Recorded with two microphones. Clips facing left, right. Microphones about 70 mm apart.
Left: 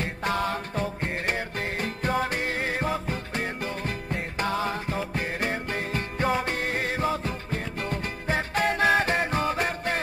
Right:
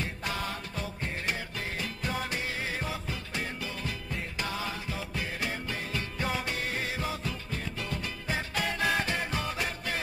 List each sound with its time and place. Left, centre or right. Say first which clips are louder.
0.0 s music: left 7 dB; left